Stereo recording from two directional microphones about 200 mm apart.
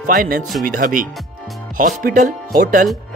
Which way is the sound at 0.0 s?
45° right (ahead or behind).